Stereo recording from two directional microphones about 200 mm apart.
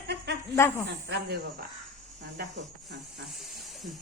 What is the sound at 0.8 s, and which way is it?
Speech, 55° right (ahead or behind).